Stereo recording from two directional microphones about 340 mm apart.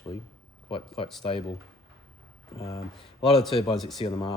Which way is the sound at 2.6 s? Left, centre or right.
Centre.